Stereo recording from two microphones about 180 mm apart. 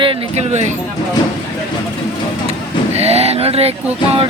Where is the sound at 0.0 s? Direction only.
35° right (ahead or behind).